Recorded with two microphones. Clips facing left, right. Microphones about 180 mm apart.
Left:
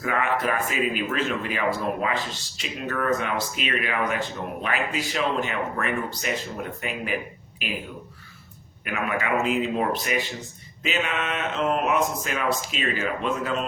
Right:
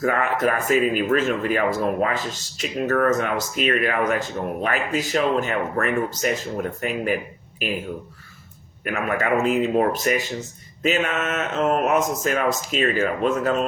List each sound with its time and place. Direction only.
0.0 s speech: 45° right (ahead or behind)
8.8 s speech: 45° right (ahead or behind)